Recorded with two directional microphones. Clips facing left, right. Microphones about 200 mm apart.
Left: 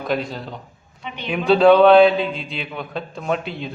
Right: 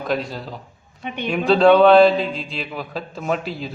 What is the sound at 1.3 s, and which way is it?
Mantra, centre (ahead or behind).